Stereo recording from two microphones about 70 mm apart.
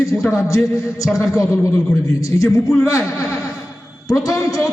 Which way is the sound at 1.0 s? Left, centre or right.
Centre.